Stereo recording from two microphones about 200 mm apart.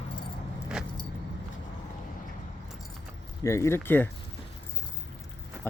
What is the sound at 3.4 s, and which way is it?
Speech, 15° left (ahead or behind).